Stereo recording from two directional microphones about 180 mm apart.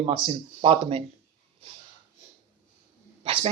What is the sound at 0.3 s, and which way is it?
Speech, 30° right (ahead or behind).